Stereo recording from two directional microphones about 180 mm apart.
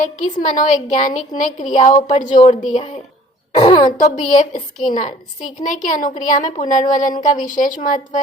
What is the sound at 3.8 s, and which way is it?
A woman's voice, 45° left (ahead or behind).